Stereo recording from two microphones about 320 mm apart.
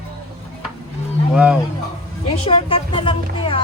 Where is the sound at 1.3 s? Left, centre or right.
Centre.